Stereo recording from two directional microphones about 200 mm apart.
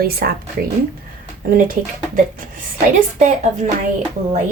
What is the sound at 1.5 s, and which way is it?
Speech, 45° right (ahead or behind).